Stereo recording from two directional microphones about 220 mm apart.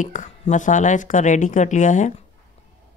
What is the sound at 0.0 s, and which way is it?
Speech, 35° left (ahead or behind).